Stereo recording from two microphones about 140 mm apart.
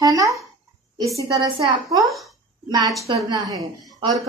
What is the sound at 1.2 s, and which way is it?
Speech, 35° right (ahead or behind).